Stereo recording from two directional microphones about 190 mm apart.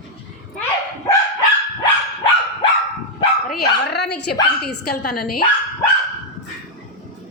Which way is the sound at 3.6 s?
60° left (ahead or behind).